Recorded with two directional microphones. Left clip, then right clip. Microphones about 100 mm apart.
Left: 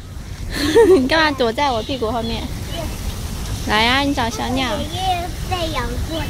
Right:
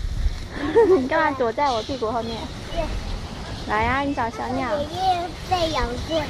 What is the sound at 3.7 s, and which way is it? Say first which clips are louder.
Speech: left 6 dB; 35° left (ahead or behind).